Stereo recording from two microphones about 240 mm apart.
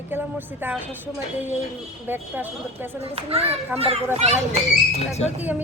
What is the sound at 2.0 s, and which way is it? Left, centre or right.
Speech, centre.